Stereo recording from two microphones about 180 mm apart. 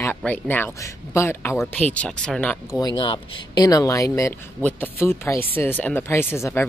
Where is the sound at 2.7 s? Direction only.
20° left (ahead or behind).